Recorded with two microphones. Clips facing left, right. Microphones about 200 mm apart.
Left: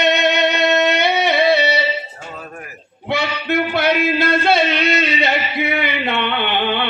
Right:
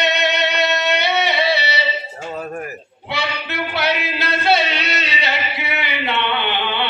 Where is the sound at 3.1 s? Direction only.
50° left (ahead or behind).